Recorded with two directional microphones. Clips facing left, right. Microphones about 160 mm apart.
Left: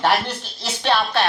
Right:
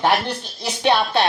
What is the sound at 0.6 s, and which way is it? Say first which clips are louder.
Speech: right 2 dB; 15° right (ahead or behind).